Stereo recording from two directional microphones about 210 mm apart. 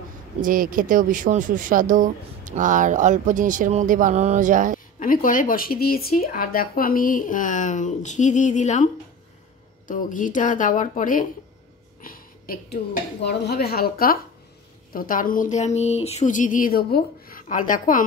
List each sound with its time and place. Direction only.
0.4 s speech: 40° right (ahead or behind)
4.9 s speech: 40° left (ahead or behind)
12.0 s a sound: 45° left (ahead or behind)
13.2 s speech: 55° left (ahead or behind)